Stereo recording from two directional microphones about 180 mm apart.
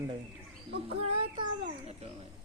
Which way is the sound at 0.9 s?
30° right (ahead or behind).